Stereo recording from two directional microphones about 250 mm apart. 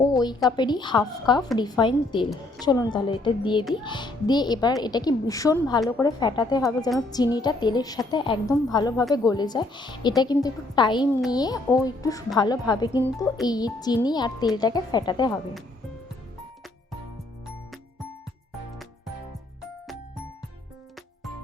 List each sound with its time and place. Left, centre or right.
0.5 s a woman's voice: centre